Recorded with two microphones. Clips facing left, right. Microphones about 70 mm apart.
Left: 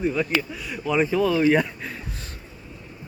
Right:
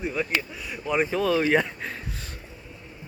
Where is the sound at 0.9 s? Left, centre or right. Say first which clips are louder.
Left 2 dB; right.